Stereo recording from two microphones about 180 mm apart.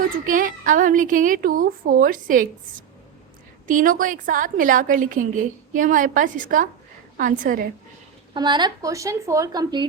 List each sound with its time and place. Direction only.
0.3 s a woman's voice: 50° right (ahead or behind)
8.3 s speech: 25° right (ahead or behind)